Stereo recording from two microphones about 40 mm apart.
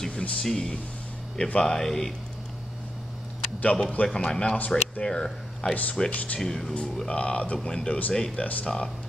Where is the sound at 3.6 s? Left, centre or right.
Left; by 5.7 s centre.